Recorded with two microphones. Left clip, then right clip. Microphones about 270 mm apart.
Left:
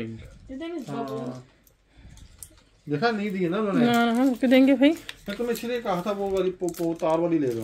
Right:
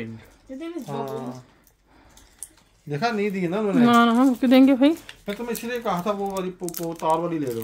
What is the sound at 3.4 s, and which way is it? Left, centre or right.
A woman's voice, right.